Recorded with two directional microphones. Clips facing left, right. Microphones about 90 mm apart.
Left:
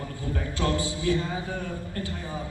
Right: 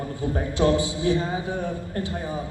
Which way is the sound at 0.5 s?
20° right (ahead or behind).